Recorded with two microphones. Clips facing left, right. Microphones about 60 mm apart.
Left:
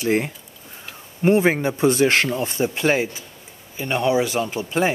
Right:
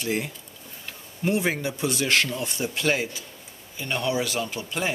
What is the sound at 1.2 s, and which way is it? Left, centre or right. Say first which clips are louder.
Speech: left 8 dB; left.